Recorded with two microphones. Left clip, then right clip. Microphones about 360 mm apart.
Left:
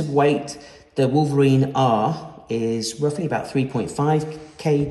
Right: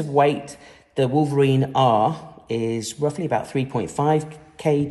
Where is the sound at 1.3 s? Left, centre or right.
Centre.